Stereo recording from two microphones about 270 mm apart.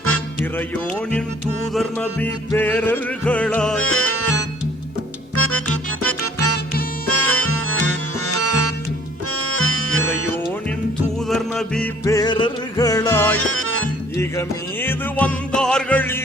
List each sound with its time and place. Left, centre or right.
1.7 s music: centre
3.8 s music: left
7.1 s music: left
11.3 s music: centre
13.3 s music: left
14.2 s music: centre